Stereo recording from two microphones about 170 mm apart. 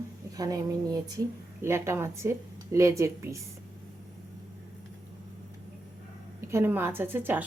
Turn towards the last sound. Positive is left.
turn(degrees=-10)  # may be behind; listen again after turning